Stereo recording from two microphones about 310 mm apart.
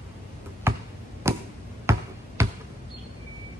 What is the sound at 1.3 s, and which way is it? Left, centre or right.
Chop, centre.